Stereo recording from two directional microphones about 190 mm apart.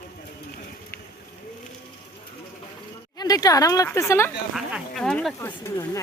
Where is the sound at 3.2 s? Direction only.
20° left (ahead or behind).